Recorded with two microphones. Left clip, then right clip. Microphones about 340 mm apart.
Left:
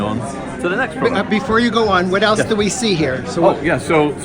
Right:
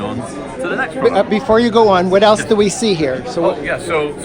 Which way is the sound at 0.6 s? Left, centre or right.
Centre.